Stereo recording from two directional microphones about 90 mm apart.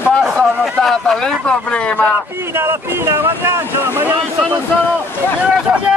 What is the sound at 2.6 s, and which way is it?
Speech, 25° right (ahead or behind).